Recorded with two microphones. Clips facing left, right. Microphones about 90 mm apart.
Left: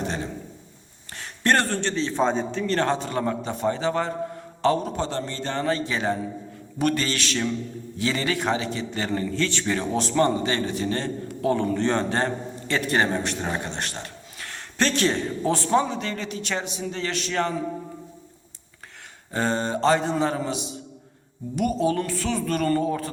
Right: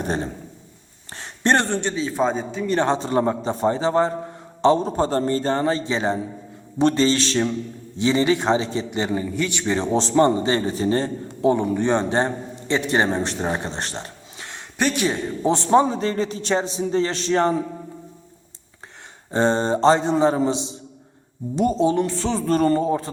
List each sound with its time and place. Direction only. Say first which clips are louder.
0.0 s a sound: right 4 dB; 35° right (ahead or behind)
1.1 s a man's voice: right 2 dB; 25° right (ahead or behind); by 2.7 s 5° right (ahead or behind)
2.7 s a man's voice: right 5 dB; 25° right (ahead or behind)
8.9 s a man's voice: right 3 dB; 15° right (ahead or behind); by 17.6 s 30° right (ahead or behind)
19.3 s a man's voice: right 6 dB; 25° right (ahead or behind)